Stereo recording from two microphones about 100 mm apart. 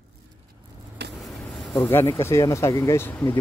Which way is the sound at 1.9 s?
30° left (ahead or behind).